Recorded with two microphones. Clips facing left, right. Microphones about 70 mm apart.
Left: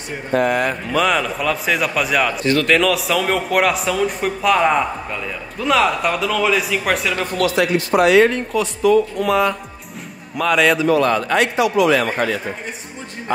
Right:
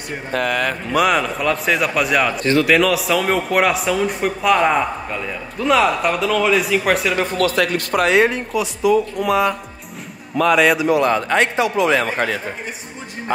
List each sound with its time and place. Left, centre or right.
0.4 s speech: right
0.9 s a man's voice: centre
7.5 s speech: right
8.2 s a man's voice: centre
10.9 s speech: centre